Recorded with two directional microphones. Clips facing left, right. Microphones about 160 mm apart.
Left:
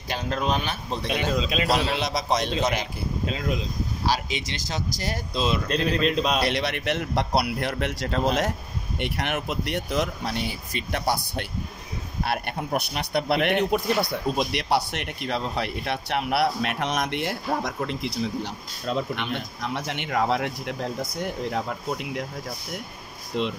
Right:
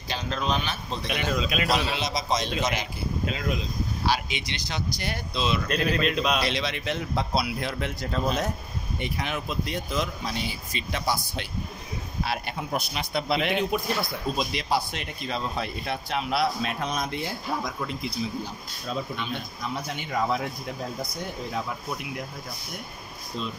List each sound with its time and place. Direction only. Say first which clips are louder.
0.1 s a man's voice: left 2 dB; 50° left (ahead or behind)
1.0 s speech: left 2 dB; 20° left (ahead or behind)
1.7 s speech: left 2 dB; 60° left (ahead or behind)
4.0 s speech: left 1 dB; 40° left (ahead or behind)
6.4 s speech: left 3 dB; 60° left (ahead or behind)
23.3 s speech: left 7 dB; 80° left